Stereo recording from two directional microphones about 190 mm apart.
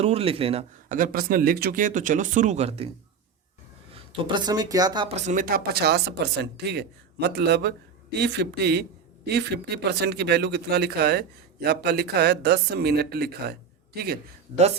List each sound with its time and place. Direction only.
0.0 s speech: 30° right (ahead or behind)
0.9 s speech: 45° right (ahead or behind); by 2.9 s 30° right (ahead or behind)
4.3 s speech: 20° right (ahead or behind)
5.0 s speech: 35° right (ahead or behind); by 14.2 s 55° right (ahead or behind)